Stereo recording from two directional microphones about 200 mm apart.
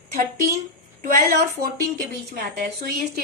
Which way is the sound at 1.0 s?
45° right (ahead or behind).